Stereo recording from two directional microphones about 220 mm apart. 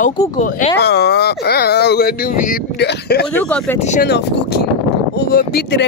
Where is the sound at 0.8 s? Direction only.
50° left (ahead or behind).